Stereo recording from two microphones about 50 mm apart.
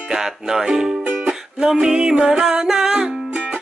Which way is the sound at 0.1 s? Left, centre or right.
Centre.